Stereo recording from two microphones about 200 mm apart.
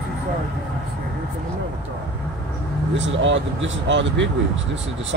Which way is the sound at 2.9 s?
65° right (ahead or behind).